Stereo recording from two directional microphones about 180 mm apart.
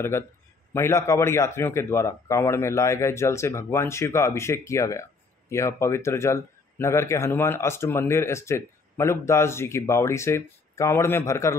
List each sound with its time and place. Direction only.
0.7 s speech: 15° left (ahead or behind)